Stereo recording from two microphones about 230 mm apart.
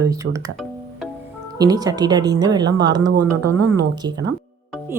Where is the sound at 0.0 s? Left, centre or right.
Centre.